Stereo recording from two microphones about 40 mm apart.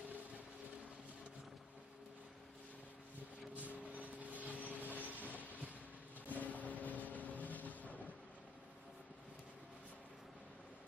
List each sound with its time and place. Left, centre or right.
3.5 s vehicle: right
6.2 s vehicle: left